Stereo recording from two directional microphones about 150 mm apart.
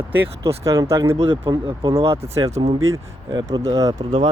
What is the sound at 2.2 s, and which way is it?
Speech, 20° right (ahead or behind).